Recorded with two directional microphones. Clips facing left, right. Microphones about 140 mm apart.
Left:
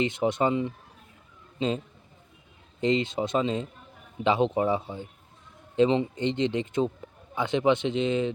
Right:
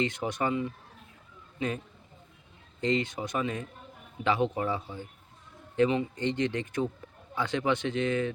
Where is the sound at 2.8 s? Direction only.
20° left (ahead or behind).